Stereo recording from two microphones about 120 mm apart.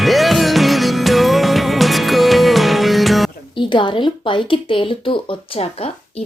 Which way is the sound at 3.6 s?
45° left (ahead or behind).